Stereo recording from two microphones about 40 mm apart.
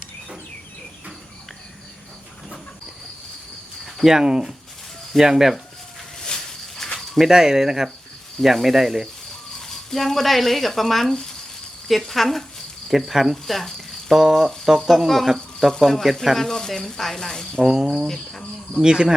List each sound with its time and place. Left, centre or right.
4.0 s speech: centre
6.1 s a sound: centre
7.2 s speech: centre
9.6 s speech: centre
12.9 s speech: centre
13.3 s cricket: centre
14.2 s speech: centre
16.4 s sizzle: centre
17.6 s speech: centre
18.1 s sizzle: centre
18.8 s speech: centre